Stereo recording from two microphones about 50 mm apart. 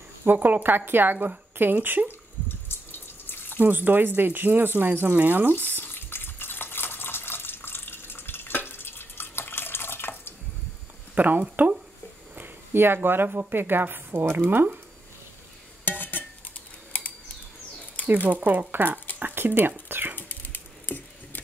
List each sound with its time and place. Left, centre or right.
0.4 s speech: right
2.0 s water: left
3.4 s speech: right
5.8 s water: left
11.1 s speech: right
12.4 s a woman's voice: right
15.8 s dishes: left
18.0 s speech: right
19.1 s a sound: right
20.2 s wood: left